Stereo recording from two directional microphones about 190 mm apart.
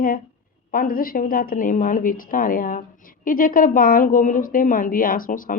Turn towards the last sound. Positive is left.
turn(degrees=45)  # may be behind; listen again after turning